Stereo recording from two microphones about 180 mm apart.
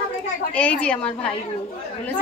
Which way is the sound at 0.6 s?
5° left (ahead or behind).